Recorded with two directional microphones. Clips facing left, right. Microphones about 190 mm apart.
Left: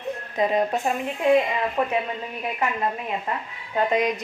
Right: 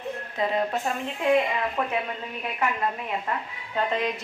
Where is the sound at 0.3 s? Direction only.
15° left (ahead or behind).